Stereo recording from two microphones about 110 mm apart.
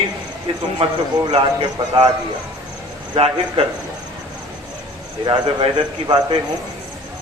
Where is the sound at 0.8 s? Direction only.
60° right (ahead or behind).